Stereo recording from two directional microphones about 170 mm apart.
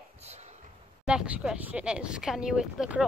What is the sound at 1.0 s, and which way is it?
Speech, 5° right (ahead or behind).